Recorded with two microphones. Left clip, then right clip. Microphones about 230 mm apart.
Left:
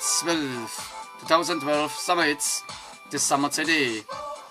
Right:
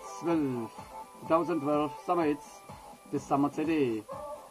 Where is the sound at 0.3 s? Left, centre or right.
Centre.